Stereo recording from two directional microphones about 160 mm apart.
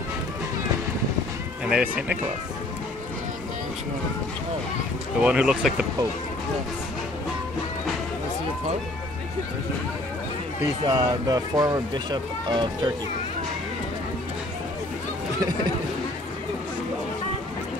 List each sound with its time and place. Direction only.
1.7 s speech: 5° right (ahead or behind)
5.2 s speech: 5° right (ahead or behind)
10.9 s speech: 25° right (ahead or behind)